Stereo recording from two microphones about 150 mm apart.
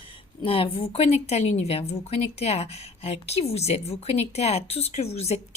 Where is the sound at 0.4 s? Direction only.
40° left (ahead or behind).